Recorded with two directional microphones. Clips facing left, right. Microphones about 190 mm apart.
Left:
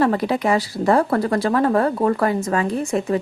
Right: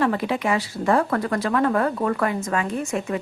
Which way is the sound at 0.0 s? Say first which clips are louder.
Left 4 dB; 40° left (ahead or behind).